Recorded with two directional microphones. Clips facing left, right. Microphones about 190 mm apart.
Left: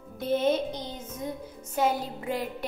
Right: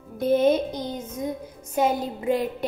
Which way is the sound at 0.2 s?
15° right (ahead or behind).